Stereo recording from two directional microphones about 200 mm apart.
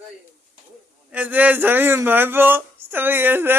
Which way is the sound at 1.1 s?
10° right (ahead or behind).